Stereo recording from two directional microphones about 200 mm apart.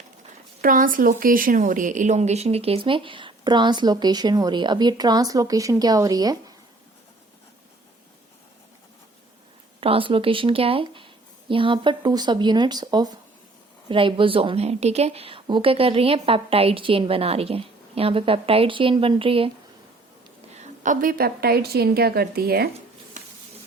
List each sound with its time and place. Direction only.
0.6 s a woman's voice: 45° right (ahead or behind); by 6.3 s 20° right (ahead or behind)
9.8 s a woman's voice: 25° right (ahead or behind)
20.6 s a woman's voice: 40° right (ahead or behind)
23.2 s spray: 35° right (ahead or behind)